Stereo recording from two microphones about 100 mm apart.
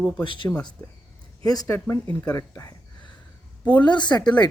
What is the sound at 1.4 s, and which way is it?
Speech, 40° left (ahead or behind).